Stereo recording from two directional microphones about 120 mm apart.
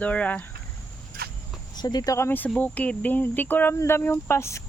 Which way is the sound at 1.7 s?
35° left (ahead or behind).